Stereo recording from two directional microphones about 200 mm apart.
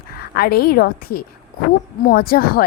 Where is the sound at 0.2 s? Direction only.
50° left (ahead or behind).